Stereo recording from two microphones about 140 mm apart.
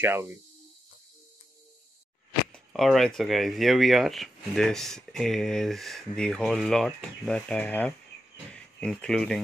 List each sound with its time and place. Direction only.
0.0 s speech: 15° right (ahead or behind)
2.5 s speech: centre (ahead or behind)